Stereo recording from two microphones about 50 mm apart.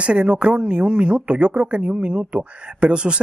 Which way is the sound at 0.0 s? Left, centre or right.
Right.